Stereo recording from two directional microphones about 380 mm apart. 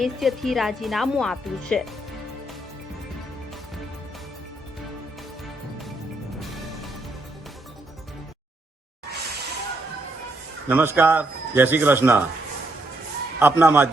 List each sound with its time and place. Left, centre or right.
0.0 s speech: centre
10.7 s speech: centre
13.4 s speech: centre